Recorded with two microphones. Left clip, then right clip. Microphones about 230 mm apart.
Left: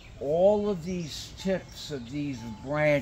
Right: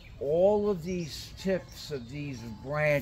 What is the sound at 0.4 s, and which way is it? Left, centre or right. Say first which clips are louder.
Speech: left 2 dB; centre.